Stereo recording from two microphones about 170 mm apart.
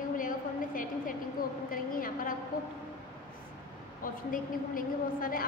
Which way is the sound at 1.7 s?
55° left (ahead or behind).